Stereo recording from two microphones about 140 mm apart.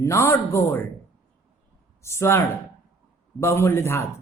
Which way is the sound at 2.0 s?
20° left (ahead or behind).